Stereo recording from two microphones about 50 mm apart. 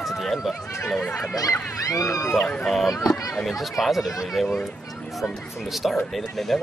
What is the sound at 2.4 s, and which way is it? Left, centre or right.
Speech, centre.